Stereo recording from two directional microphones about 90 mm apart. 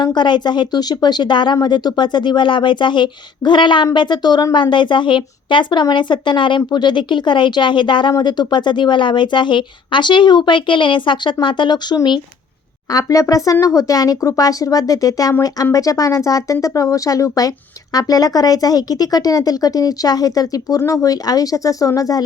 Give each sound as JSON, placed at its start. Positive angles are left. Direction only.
{"t": 0.0, "sound": "speech", "side_deg": 55}
{"t": 12.9, "sound": "speech", "side_deg": 40}